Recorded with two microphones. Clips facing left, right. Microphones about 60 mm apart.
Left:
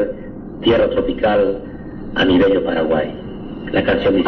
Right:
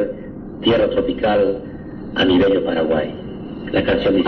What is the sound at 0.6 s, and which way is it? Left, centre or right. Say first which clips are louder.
Speech: left 2 dB; centre.